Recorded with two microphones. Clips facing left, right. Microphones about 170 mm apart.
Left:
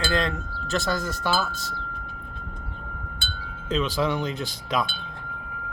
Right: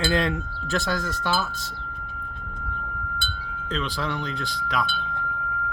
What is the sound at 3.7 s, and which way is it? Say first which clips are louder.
Speech: left 5 dB; 20° left (ahead or behind).